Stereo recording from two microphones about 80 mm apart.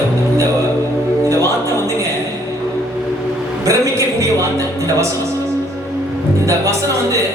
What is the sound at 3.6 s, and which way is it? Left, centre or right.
A man's voice, right.